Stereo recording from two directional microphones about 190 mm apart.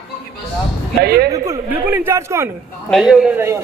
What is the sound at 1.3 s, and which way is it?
A woman's voice, 20° right (ahead or behind).